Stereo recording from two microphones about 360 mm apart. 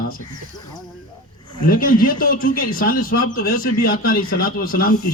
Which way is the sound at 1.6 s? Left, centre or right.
Left.